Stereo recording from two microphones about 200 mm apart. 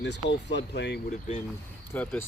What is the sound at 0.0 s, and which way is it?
Speech, 60° left (ahead or behind).